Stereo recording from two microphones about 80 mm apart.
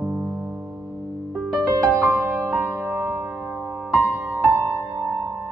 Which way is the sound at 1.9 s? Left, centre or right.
Right.